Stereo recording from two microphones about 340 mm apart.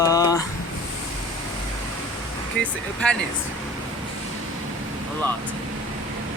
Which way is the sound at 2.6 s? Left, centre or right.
Centre.